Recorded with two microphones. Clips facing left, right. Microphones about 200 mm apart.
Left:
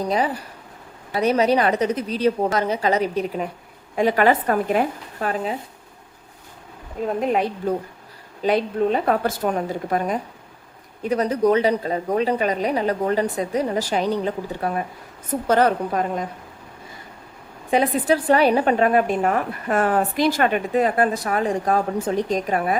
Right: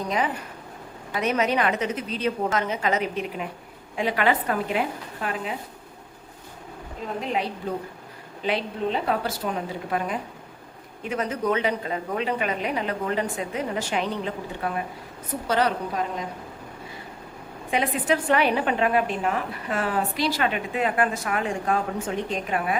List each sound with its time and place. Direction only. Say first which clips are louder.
0.0 s a woman's voice: left 4 dB; 35° left (ahead or behind)
7.2 s a woman's voice: left 5 dB; 50° left (ahead or behind)
17.7 s a woman's voice: left 5 dB; 35° left (ahead or behind)